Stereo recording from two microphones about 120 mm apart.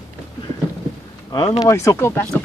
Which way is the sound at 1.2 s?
30° left (ahead or behind).